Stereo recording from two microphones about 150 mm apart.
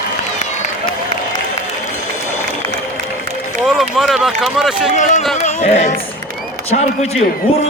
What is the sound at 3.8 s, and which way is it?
Speech, centre (ahead or behind).